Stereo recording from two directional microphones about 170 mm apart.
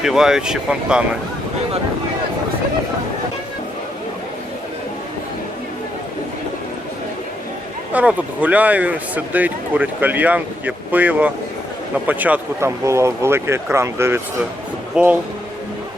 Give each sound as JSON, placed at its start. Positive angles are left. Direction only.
{"t": 0.0, "sound": "speech", "side_deg": 0}
{"t": 7.9, "sound": "speech", "side_deg": -10}